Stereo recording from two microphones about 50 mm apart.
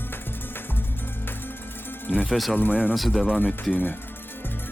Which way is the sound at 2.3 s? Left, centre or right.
Centre.